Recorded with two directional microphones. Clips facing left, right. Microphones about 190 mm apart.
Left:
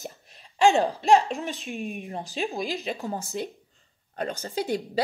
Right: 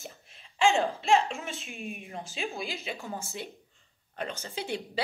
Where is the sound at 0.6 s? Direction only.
40° left (ahead or behind).